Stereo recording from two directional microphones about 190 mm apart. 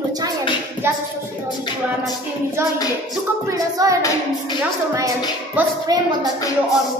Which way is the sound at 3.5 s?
15° right (ahead or behind).